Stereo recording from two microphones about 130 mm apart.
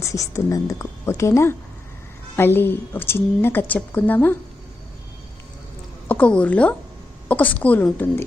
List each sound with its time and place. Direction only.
0.0 s a woman's voice: 25° left (ahead or behind)
6.1 s a woman's voice: 10° left (ahead or behind)